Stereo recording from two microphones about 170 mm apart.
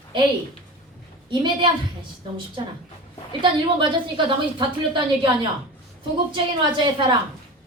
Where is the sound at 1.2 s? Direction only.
30° right (ahead or behind).